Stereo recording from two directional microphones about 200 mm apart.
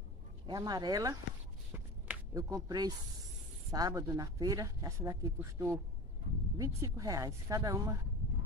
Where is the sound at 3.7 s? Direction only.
20° right (ahead or behind).